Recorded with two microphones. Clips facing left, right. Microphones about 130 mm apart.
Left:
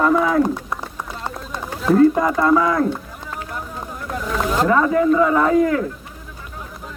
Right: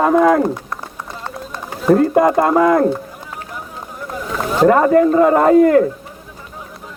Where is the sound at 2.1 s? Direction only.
50° right (ahead or behind).